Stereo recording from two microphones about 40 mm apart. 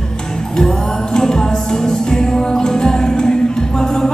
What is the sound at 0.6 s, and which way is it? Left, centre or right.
Music, centre.